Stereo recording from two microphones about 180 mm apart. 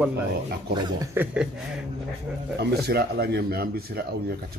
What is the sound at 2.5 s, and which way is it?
Speech, 65° right (ahead or behind).